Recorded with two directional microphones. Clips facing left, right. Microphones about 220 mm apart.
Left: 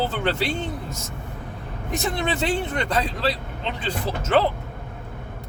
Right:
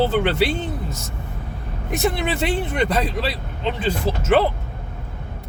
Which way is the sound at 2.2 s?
5° right (ahead or behind).